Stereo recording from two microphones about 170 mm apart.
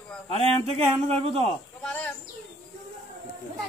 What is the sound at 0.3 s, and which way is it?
Speech, 35° right (ahead or behind).